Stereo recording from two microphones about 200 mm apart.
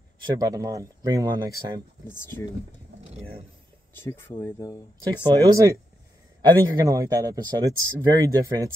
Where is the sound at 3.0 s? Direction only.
30° right (ahead or behind).